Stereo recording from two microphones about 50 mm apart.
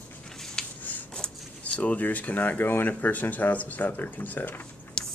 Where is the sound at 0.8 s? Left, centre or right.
Left.